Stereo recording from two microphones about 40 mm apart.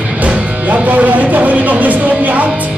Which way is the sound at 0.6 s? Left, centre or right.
Right.